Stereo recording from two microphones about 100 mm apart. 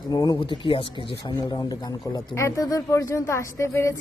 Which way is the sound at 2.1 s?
35° left (ahead or behind).